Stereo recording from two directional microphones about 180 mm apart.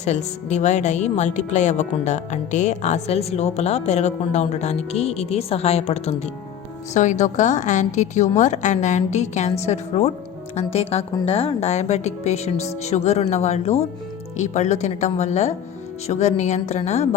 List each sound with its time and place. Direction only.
0.0 s a woman's voice: 40° left (ahead or behind)